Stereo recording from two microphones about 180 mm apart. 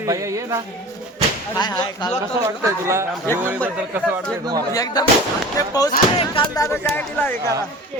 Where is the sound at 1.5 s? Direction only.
25° left (ahead or behind).